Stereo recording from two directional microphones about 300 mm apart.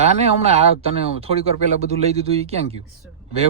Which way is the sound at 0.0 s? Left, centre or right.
Right.